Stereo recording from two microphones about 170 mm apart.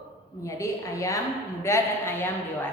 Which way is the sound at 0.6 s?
20° left (ahead or behind).